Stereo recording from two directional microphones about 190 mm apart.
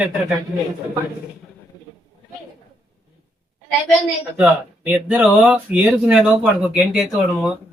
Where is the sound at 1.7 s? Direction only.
20° left (ahead or behind).